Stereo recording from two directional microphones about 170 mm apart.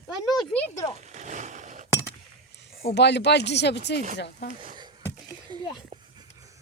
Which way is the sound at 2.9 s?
90° left.